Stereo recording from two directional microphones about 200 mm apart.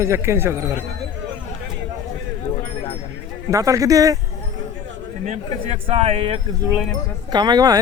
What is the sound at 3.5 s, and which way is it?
Speech, 15° right (ahead or behind).